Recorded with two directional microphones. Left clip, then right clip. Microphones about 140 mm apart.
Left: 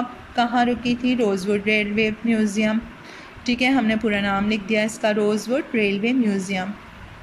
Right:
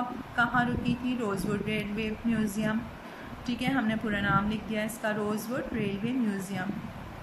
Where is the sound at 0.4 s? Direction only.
25° left (ahead or behind).